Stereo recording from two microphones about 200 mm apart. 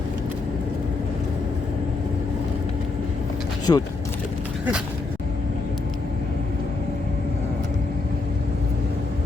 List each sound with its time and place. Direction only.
3.7 s speech: 15° left (ahead or behind)